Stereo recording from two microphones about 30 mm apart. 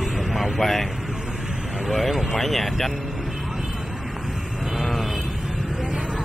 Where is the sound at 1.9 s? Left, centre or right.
Centre.